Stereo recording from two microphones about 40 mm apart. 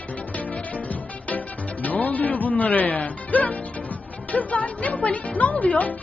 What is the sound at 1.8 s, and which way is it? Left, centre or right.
Speech, left.